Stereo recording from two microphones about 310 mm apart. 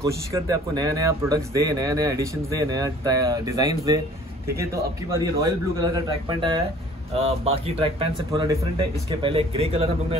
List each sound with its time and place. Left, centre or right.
0.0 s speech: centre